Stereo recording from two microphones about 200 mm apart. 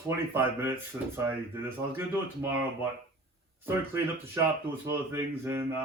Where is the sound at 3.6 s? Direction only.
15° right (ahead or behind).